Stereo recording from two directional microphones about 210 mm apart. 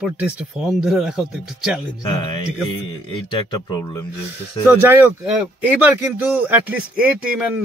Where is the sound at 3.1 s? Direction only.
25° left (ahead or behind).